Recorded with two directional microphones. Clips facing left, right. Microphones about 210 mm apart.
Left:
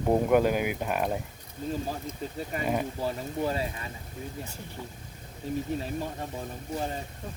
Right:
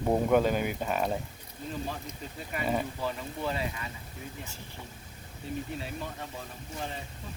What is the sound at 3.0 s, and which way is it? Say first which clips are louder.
Speech: left 4 dB; 40° left (ahead or behind).